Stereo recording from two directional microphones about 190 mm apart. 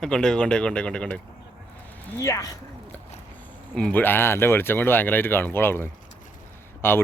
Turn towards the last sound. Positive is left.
turn(degrees=10)  # may be behind; listen again after turning